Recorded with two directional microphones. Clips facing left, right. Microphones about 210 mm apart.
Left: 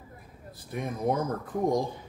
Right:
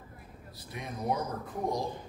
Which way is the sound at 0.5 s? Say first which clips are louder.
Left 8 dB; 50° left (ahead or behind).